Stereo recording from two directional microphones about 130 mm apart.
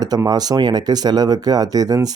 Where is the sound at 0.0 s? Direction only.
30° right (ahead or behind).